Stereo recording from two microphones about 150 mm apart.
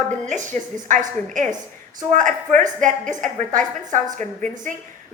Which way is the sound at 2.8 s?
55° right (ahead or behind).